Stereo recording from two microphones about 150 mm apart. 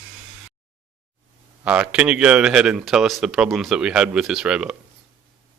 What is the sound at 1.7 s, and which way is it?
Speech, 10° right (ahead or behind).